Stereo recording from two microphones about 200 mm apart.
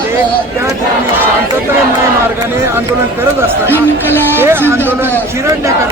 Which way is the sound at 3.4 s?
10° right (ahead or behind).